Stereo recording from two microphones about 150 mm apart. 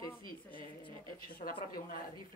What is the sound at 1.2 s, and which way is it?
Speech, 75° left (ahead or behind).